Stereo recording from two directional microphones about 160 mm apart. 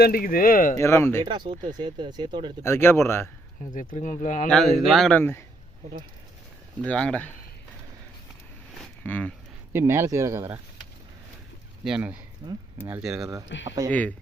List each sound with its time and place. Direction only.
0.0 s speech: 65° left (ahead or behind)
0.8 s speech: 15° left (ahead or behind)
1.2 s speech: 30° right (ahead or behind)
2.6 s speech: 15° left (ahead or behind)
3.9 s speech: 55° left (ahead or behind)
4.4 s speech: centre (ahead or behind)
6.8 s speech: 5° left (ahead or behind)
8.8 s a sound: 10° left (ahead or behind)
9.7 s speech: 15° right (ahead or behind)
11.9 s speech: 5° right (ahead or behind)
13.3 s speech: 20° right (ahead or behind)